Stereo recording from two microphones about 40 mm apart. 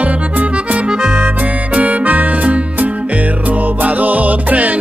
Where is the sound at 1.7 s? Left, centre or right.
Right.